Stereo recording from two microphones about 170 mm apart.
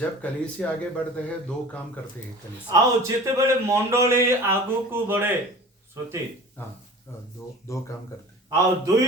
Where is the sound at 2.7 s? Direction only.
20° right (ahead or behind).